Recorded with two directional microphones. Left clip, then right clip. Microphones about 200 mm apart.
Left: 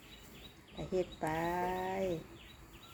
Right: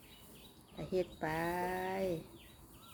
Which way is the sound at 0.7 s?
Centre (ahead or behind).